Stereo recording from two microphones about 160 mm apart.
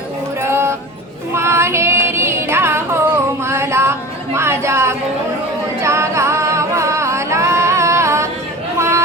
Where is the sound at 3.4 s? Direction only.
15° right (ahead or behind).